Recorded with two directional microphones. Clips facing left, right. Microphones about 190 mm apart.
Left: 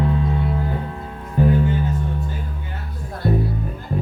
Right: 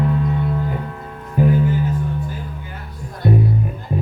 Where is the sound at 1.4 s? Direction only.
10° right (ahead or behind).